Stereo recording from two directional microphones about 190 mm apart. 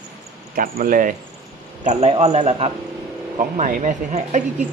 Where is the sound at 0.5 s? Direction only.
50° right (ahead or behind).